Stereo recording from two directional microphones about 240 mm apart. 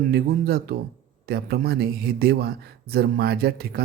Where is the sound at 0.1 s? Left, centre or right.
Right.